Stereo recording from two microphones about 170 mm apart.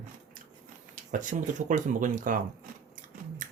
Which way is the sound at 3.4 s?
50° right (ahead or behind).